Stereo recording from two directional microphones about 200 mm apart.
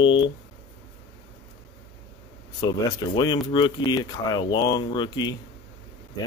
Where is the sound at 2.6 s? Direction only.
20° left (ahead or behind).